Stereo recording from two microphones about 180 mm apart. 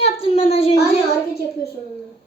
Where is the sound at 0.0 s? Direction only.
35° left (ahead or behind).